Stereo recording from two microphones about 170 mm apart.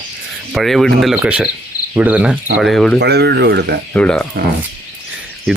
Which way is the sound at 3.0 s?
75° right (ahead or behind).